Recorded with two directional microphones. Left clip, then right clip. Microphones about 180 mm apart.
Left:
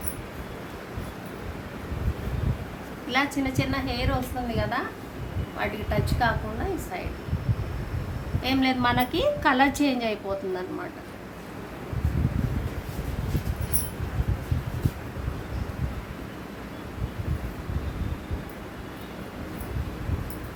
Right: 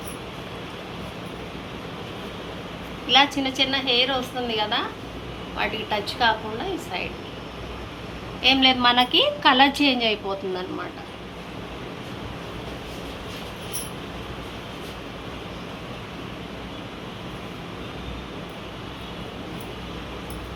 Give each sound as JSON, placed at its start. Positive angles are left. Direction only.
{"t": 3.1, "sound": "a woman's voice", "side_deg": 30}
{"t": 8.4, "sound": "a woman's voice", "side_deg": 30}